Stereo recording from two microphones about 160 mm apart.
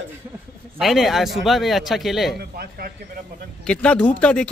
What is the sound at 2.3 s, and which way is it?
Speech, 75° right (ahead or behind).